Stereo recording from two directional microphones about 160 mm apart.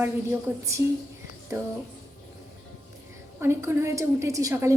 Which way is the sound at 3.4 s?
15° right (ahead or behind).